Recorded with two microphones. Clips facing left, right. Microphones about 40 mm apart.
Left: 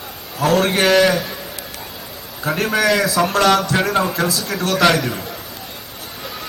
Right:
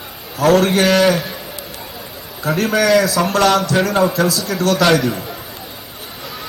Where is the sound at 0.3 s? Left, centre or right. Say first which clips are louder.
Right 4 dB; right.